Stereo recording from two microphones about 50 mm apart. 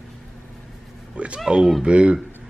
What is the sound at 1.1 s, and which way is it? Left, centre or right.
Cat, right.